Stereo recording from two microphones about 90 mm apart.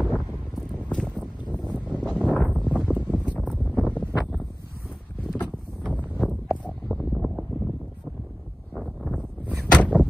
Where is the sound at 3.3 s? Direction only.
15° left (ahead or behind).